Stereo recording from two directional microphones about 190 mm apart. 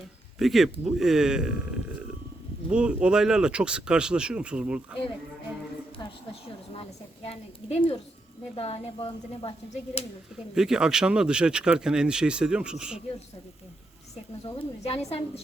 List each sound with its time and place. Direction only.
0.3 s speech: centre (ahead or behind)
7.3 s speech: 30° left (ahead or behind)
10.5 s speech: 5° right (ahead or behind)
14.6 s speech: 30° left (ahead or behind)